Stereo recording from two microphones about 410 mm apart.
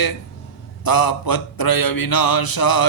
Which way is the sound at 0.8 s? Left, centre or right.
Left.